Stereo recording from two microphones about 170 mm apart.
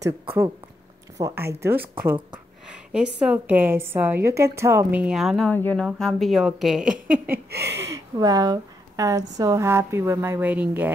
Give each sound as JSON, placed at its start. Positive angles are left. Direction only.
{"t": 0.0, "sound": "a woman's voice", "side_deg": -15}
{"t": 2.7, "sound": "a sound", "side_deg": -5}
{"t": 3.2, "sound": "a woman's voice", "side_deg": -10}
{"t": 7.1, "sound": "speech", "side_deg": -65}
{"t": 7.7, "sound": "a woman's voice", "side_deg": -15}